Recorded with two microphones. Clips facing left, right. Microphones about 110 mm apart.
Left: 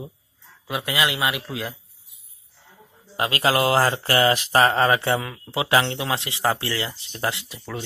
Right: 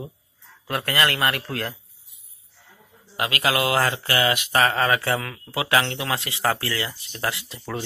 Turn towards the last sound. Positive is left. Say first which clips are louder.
# right 2 dB
turn(degrees=-5)  # may be behind; listen again after turning